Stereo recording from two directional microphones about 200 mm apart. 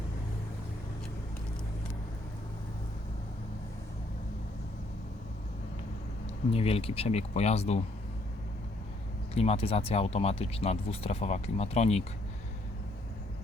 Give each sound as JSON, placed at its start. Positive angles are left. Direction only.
{"t": 6.5, "sound": "speech", "side_deg": 30}
{"t": 9.3, "sound": "speech", "side_deg": 30}